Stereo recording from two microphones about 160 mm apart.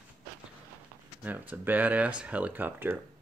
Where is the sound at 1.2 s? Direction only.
10° right (ahead or behind).